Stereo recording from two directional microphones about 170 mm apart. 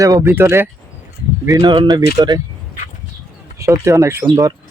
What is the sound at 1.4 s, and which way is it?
Speech, 25° right (ahead or behind).